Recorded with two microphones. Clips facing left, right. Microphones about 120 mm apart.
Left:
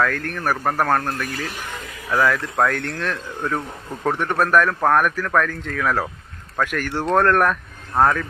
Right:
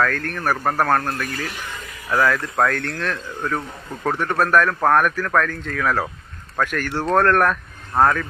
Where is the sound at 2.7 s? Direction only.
15° left (ahead or behind); by 8.2 s centre (ahead or behind).